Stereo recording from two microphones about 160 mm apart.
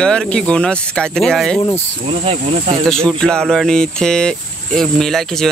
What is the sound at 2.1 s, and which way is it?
Speech, 35° right (ahead or behind).